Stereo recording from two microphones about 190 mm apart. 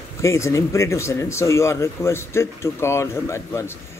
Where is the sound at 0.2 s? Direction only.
15° left (ahead or behind).